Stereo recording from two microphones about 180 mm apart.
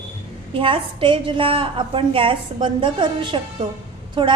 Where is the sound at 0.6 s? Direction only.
30° right (ahead or behind).